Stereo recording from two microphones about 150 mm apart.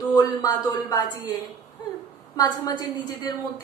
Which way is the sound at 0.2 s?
25° left (ahead or behind).